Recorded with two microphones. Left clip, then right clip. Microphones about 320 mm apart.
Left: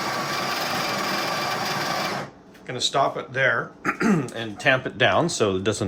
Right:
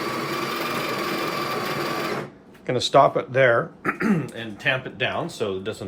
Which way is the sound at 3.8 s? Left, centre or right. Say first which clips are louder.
Left 1 dB; centre.